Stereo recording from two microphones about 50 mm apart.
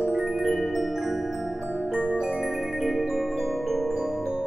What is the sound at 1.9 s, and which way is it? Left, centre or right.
Music, centre.